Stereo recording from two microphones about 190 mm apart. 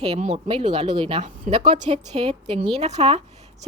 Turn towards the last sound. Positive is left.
turn(degrees=-35)  # may be behind; listen again after turning